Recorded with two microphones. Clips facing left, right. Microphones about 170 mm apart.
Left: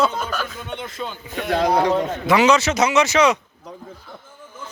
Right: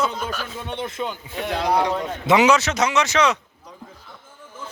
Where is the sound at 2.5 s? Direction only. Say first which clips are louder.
Left 2 dB; centre (ahead or behind).